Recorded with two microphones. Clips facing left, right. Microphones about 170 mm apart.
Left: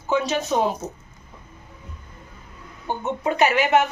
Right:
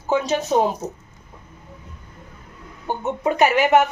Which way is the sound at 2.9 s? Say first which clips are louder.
Right 1 dB; 10° right (ahead or behind).